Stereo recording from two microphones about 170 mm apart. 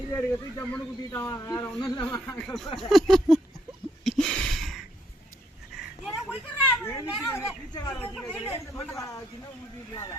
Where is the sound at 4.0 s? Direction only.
Centre (ahead or behind).